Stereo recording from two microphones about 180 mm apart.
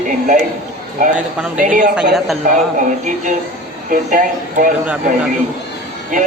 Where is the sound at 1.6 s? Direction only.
45° right (ahead or behind).